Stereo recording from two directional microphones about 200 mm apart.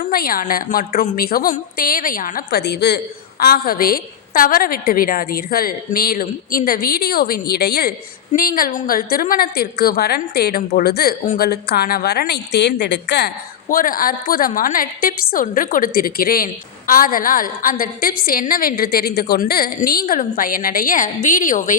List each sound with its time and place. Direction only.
0.0 s a woman's voice: 45° left (ahead or behind)